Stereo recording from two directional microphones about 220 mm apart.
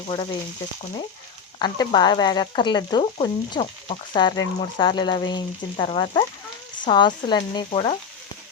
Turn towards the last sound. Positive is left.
turn(degrees=25)  # may be behind; listen again after turning